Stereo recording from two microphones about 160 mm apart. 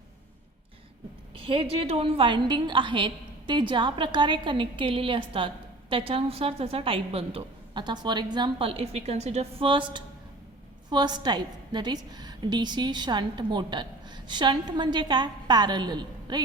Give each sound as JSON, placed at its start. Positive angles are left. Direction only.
{"t": 1.4, "sound": "a woman's voice", "side_deg": -35}